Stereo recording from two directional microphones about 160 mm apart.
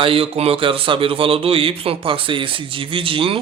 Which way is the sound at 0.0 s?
35° right (ahead or behind).